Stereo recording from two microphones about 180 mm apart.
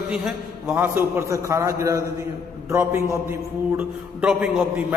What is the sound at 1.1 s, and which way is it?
A man's voice, 15° right (ahead or behind).